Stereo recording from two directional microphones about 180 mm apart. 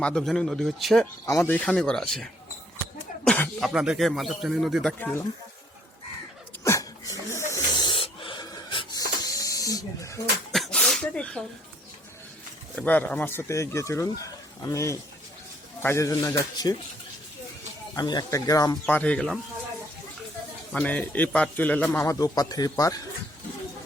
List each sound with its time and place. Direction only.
0.0 s speech: 5° left (ahead or behind)
1.2 s speech: 15° left (ahead or behind)
3.2 s a sound: 5° left (ahead or behind)
3.7 s speech: 5° right (ahead or behind)
6.7 s a sound: 20° left (ahead or behind)
10.5 s sneeze: centre (ahead or behind)
12.7 s speech: 10° left (ahead or behind)
17.9 s speech: 25° left (ahead or behind)
18.9 s speech: 10° left (ahead or behind)
20.7 s speech: 10° left (ahead or behind)